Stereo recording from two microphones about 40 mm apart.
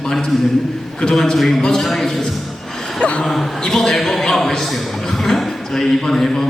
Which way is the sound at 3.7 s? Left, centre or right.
Centre.